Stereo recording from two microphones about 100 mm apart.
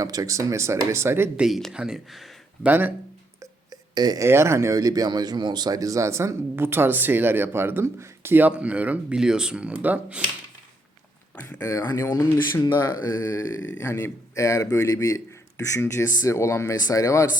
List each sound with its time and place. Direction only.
0.0 s speech: 35° right (ahead or behind)
1.4 s speech: centre (ahead or behind)
2.6 s speech: 20° right (ahead or behind)
3.4 s a sound: 40° right (ahead or behind)
4.2 s speech: 25° right (ahead or behind)
11.3 s speech: 25° left (ahead or behind); by 13.1 s 40° left (ahead or behind)
13.1 s speech: 25° left (ahead or behind)